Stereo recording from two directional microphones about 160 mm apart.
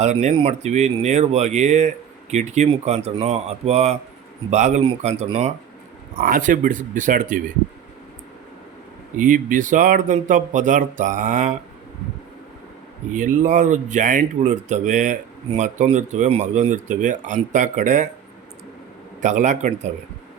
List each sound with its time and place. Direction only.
0.0 s speech: 45° right (ahead or behind)
6.2 s speech: 55° right (ahead or behind)
9.1 s speech: 55° right (ahead or behind)
13.1 s speech: 55° right (ahead or behind)
19.2 s speech: 50° right (ahead or behind)